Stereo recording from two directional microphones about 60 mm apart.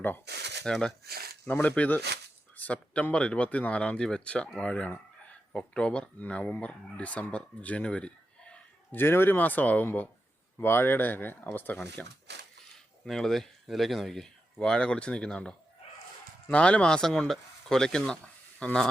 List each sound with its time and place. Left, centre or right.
0.6 s speech: centre
1.5 s speech: left
9.0 s speech: left
10.6 s speech: left
12.0 s speech: centre